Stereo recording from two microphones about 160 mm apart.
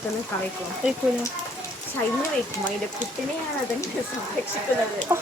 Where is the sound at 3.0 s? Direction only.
50° left (ahead or behind).